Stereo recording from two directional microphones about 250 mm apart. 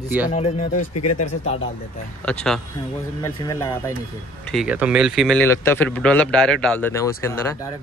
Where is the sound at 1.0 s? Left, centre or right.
Left.